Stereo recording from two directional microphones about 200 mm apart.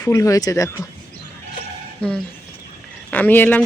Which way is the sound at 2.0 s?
5° left (ahead or behind).